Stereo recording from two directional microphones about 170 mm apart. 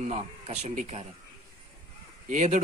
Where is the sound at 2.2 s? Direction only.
45° right (ahead or behind).